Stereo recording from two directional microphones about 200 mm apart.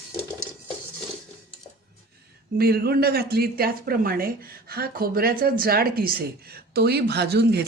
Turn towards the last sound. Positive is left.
turn(degrees=-55)  # may be behind; listen again after turning